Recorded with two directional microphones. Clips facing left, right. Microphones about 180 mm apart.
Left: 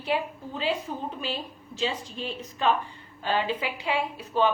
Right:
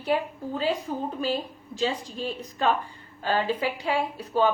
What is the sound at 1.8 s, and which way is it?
A woman's voice, 40° right (ahead or behind).